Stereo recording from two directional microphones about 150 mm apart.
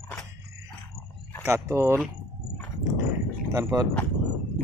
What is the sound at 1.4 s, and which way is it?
Speech, 20° right (ahead or behind).